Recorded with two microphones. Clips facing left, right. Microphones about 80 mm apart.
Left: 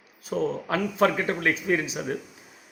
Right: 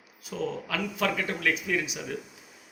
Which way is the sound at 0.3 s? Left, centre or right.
Left.